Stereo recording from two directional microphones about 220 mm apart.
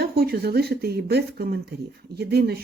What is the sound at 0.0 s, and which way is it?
Speech, 45° right (ahead or behind).